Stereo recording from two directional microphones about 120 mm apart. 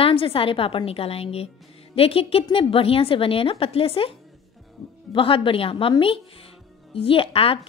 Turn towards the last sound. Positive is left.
turn(degrees=50)  # may be behind; listen again after turning